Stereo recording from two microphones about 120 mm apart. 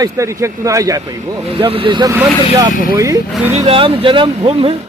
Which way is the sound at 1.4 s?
50° right (ahead or behind).